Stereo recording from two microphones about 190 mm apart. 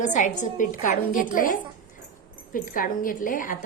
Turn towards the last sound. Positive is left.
turn(degrees=45)  # may be behind; listen again after turning